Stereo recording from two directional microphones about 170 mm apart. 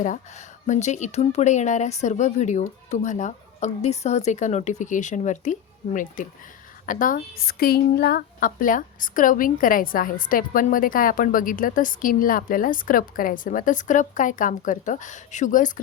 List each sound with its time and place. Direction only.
0.0 s speech: 45° left (ahead or behind)